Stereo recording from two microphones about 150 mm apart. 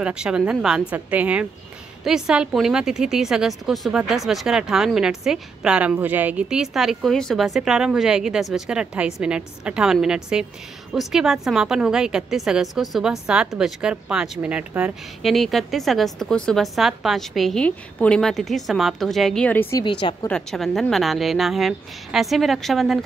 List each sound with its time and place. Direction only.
0.0 s a woman's voice: 5° right (ahead or behind); by 19.8 s 15° left (ahead or behind)
19.8 s a woman's voice: 30° left (ahead or behind)
20.2 s a woman's voice: 5° left (ahead or behind)